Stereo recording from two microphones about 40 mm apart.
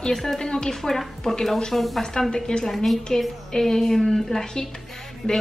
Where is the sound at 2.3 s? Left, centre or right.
Centre.